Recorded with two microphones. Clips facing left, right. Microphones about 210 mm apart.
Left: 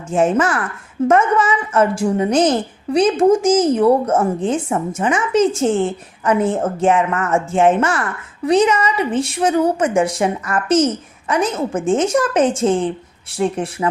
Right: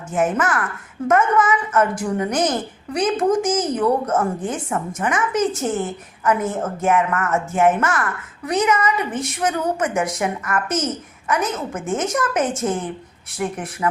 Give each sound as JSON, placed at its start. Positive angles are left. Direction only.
{"t": 0.1, "sound": "a woman's voice", "side_deg": 30}